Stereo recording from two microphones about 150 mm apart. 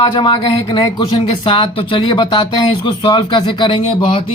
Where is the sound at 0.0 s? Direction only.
30° left (ahead or behind).